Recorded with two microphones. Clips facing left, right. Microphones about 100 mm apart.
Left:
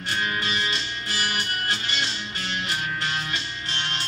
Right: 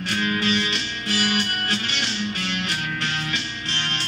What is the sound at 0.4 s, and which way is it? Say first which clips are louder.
Music: right 4 dB; 70° right (ahead or behind).